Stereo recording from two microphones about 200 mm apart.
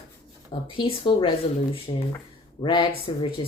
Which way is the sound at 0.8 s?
25° left (ahead or behind).